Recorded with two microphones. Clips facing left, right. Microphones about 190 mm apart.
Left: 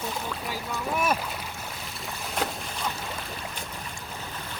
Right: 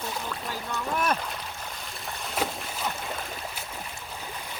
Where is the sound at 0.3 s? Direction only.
5° left (ahead or behind).